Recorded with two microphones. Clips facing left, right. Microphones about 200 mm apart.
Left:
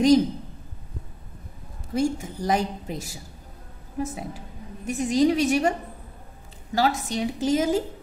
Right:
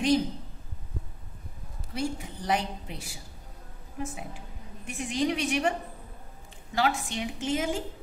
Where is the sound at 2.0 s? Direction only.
45° left (ahead or behind).